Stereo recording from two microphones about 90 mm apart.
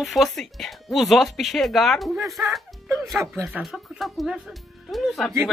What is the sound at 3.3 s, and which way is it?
Speech, 20° right (ahead or behind).